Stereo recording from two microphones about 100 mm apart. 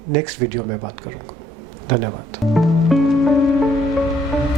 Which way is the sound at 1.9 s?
20° right (ahead or behind).